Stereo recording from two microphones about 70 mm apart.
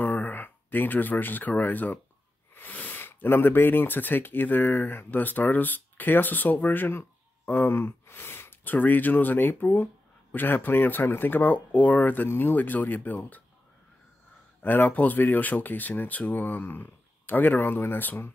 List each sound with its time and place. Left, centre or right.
0.0 s speech: left
14.6 s speech: left